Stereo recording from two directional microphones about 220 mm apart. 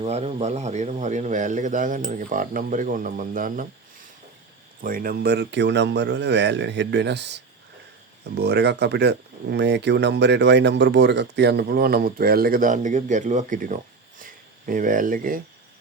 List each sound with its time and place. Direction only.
0.0 s a man's voice: 30° right (ahead or behind)
4.8 s speech: 40° right (ahead or behind)
14.2 s a sound: 35° right (ahead or behind)